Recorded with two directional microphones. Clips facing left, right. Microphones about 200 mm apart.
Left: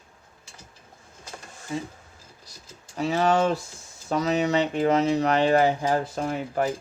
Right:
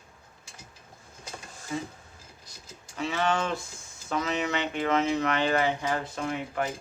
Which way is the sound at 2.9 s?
40° left (ahead or behind).